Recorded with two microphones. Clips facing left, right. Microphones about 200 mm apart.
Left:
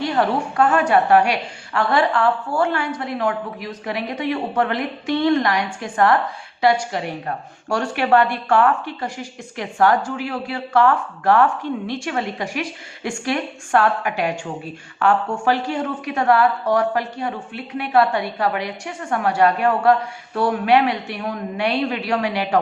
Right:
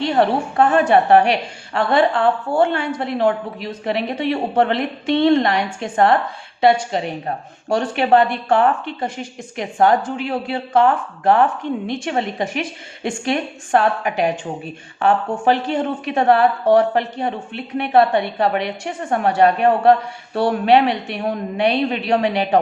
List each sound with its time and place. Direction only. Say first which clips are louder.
0.0 s speech: right 3 dB; 25° right (ahead or behind)
15.4 s speech: right 4 dB; 20° right (ahead or behind)